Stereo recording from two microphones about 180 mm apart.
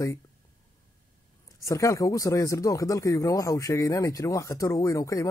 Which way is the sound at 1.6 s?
15° left (ahead or behind).